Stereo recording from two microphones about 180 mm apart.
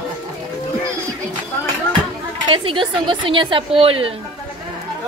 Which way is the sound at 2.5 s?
30° right (ahead or behind).